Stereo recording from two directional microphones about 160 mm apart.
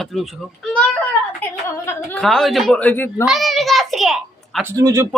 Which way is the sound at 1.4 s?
15° left (ahead or behind).